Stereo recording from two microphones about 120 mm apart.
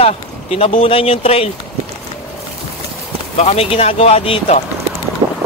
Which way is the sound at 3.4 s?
60° left (ahead or behind).